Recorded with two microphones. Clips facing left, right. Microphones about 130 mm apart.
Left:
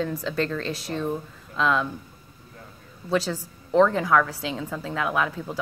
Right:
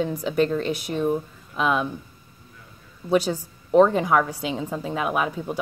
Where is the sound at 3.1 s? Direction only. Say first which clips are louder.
Right 4 dB; 15° right (ahead or behind).